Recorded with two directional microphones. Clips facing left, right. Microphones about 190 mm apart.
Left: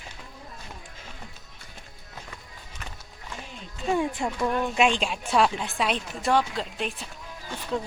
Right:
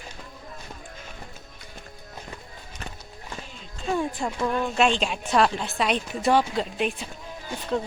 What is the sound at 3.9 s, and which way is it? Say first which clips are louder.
A woman's voice: left 1 dB; 15° left (ahead or behind).